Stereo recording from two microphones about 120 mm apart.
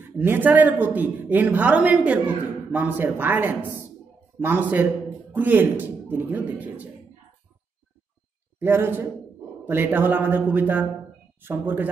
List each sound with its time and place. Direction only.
0.2 s a woman's voice: 15° right (ahead or behind)
8.5 s a man's voice: 20° right (ahead or behind)